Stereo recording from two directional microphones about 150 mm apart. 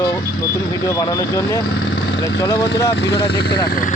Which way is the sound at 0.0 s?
25° left (ahead or behind).